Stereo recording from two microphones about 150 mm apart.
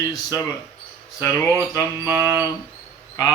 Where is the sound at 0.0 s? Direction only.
25° left (ahead or behind).